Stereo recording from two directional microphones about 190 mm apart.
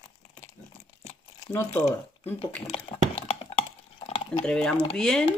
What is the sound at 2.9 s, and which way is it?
Typing, 25° left (ahead or behind).